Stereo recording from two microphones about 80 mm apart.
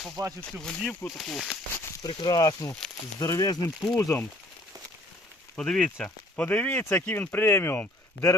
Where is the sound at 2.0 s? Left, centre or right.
Left.